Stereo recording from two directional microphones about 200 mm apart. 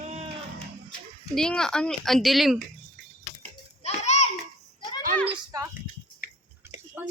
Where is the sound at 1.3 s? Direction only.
5° left (ahead or behind).